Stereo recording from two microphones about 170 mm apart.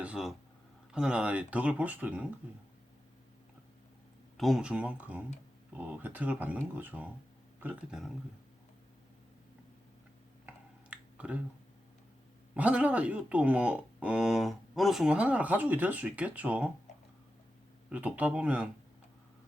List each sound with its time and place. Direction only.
0.0 s speech: 5° right (ahead or behind)
4.4 s speech: centre (ahead or behind)
10.4 s a sound: 10° right (ahead or behind)
12.5 s speech: 10° right (ahead or behind)
17.8 s speech: 10° right (ahead or behind)